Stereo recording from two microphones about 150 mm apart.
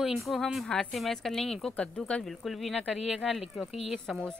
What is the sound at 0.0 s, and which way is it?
Speech, centre (ahead or behind).